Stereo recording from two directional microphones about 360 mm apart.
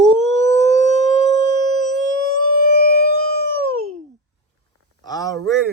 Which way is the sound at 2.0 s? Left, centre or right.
Left.